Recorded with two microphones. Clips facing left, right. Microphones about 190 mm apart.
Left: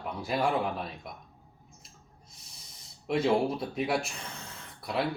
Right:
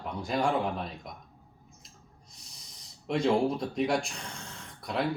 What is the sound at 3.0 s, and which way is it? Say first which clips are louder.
Speech: even; 5° left (ahead or behind).